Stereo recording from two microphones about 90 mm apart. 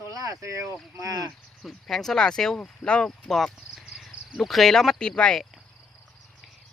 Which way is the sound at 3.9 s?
5° right (ahead or behind).